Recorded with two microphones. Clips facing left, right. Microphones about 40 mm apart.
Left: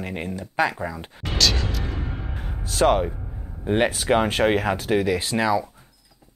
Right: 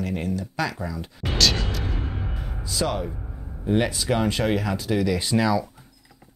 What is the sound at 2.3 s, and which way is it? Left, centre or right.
Music, left.